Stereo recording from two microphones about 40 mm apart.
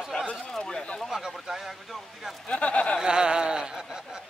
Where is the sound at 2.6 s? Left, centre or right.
Left.